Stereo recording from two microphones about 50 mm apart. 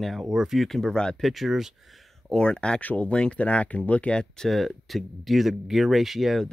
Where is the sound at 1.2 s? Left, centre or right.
Centre.